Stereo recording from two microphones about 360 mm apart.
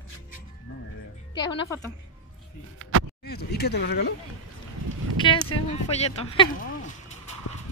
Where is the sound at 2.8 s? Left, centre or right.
Right.